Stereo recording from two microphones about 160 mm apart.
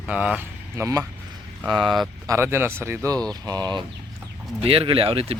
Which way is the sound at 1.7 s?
Centre (ahead or behind).